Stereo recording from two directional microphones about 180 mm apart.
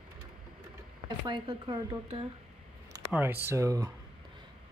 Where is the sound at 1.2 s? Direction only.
25° right (ahead or behind).